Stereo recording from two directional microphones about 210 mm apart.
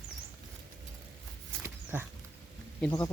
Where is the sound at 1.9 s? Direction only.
10° right (ahead or behind).